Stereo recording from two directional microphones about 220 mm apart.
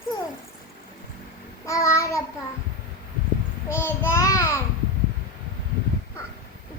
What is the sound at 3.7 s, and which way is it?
Child singing, 10° left (ahead or behind).